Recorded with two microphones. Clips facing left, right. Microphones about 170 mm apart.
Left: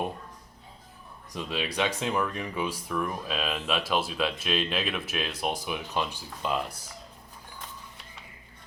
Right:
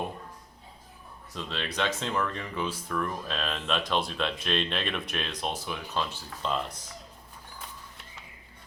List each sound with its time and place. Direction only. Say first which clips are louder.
1.3 s speech: left 3 dB; 15° left (ahead or behind)